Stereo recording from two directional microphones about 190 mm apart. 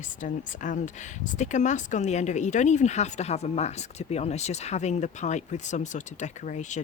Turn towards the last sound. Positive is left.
turn(degrees=40)  # may be behind; listen again after turning